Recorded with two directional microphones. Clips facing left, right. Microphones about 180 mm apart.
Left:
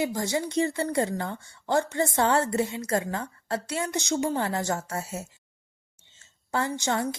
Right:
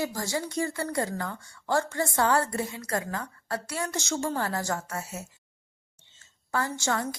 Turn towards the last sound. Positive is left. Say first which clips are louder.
# left 2 dB
turn(degrees=20)  # may be behind; listen again after turning